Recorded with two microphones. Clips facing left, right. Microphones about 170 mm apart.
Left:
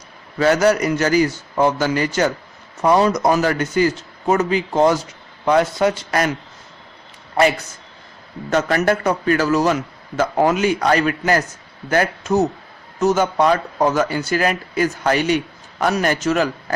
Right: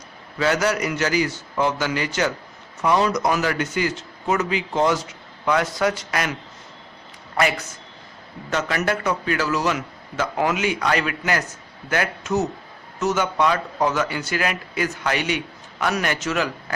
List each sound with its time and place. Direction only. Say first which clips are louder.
0.3 s a man's voice: left 6 dB; 45° left (ahead or behind); by 6.1 s 25° left (ahead or behind)
6.1 s a man's voice: left 6 dB; 40° left (ahead or behind)
7.3 s speech: left 5 dB; 30° left (ahead or behind)
8.4 s a man's voice: left 6 dB; 45° left (ahead or behind)